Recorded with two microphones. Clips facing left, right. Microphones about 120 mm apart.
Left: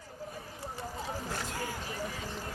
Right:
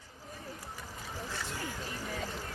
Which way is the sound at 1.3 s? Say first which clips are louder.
Left 3 dB; 45° left (ahead or behind).